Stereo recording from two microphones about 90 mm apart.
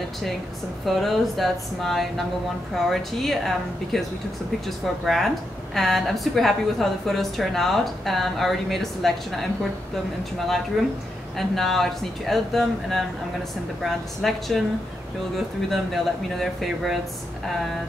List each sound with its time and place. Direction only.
0.8 s a woman's voice: centre (ahead or behind)
10.8 s a woman's voice: centre (ahead or behind)
14.2 s a woman's voice: 5° left (ahead or behind)